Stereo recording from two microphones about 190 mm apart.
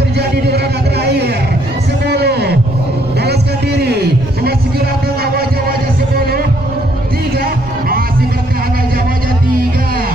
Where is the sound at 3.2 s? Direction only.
60° right (ahead or behind).